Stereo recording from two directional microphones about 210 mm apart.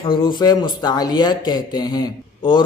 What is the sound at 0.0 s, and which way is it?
Speech, 20° left (ahead or behind).